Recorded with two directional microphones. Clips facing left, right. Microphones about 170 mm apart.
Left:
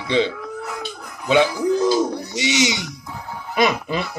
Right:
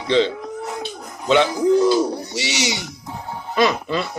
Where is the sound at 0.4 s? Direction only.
25° right (ahead or behind).